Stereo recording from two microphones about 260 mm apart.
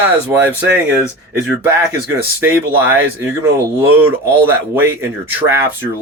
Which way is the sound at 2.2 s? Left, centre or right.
Centre.